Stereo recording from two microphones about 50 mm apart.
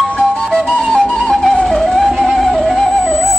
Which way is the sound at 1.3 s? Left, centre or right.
Centre.